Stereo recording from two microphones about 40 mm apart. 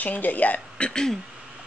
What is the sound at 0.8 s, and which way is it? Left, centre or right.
Speech, centre.